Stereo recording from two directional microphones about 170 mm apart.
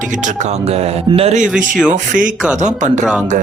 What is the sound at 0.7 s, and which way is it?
Speech, 35° right (ahead or behind).